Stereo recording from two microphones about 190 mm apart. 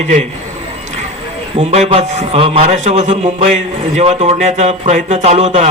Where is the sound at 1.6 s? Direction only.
30° right (ahead or behind).